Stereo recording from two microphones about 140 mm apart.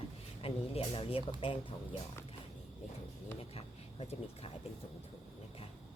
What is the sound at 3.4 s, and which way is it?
Speech, 45° left (ahead or behind).